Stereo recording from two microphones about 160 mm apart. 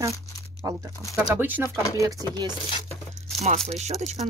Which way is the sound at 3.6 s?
45° right (ahead or behind).